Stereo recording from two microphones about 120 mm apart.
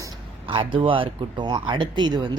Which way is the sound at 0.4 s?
45° right (ahead or behind).